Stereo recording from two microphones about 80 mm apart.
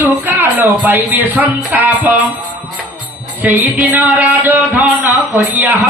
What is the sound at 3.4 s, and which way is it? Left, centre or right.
Music, right.